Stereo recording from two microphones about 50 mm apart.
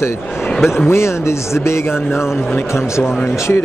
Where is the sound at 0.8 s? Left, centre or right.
Left.